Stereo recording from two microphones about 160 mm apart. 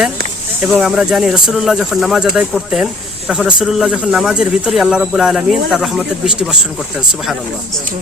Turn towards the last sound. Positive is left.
turn(degrees=-5)  # may be behind; listen again after turning